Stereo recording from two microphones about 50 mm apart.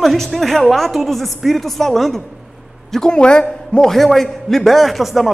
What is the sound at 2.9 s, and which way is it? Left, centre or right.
Speech, centre.